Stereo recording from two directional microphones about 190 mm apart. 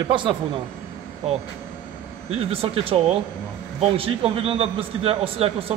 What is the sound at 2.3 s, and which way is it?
A man's voice, 30° right (ahead or behind).